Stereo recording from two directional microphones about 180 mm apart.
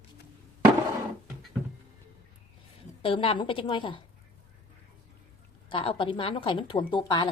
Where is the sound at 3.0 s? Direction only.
30° left (ahead or behind).